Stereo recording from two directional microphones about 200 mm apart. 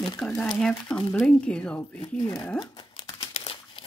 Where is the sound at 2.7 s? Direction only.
20° left (ahead or behind).